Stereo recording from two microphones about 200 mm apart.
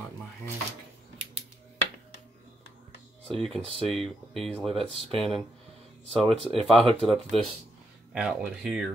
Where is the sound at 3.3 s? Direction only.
Centre (ahead or behind).